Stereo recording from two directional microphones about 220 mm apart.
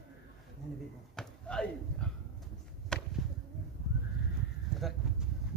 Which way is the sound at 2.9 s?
5° left (ahead or behind).